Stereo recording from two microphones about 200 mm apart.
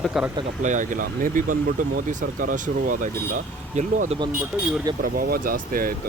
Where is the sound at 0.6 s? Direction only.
40° right (ahead or behind).